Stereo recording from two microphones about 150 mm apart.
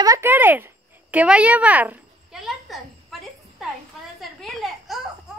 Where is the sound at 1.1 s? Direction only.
10° right (ahead or behind).